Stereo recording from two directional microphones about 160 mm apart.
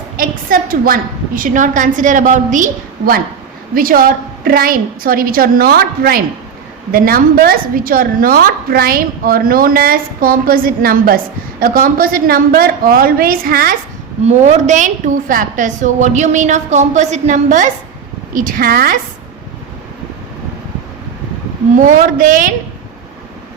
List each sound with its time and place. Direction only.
0.2 s a woman's voice: 60° right (ahead or behind)
3.8 s a woman's voice: 60° right (ahead or behind)
14.3 s a woman's voice: 45° right (ahead or behind); by 18.9 s 65° right (ahead or behind)
21.8 s a woman's voice: 55° right (ahead or behind)